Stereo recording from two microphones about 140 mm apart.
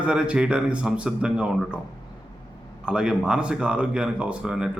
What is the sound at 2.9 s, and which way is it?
A man's voice, 5° right (ahead or behind).